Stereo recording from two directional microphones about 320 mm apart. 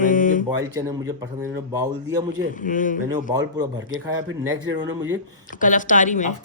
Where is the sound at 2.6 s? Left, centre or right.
Left.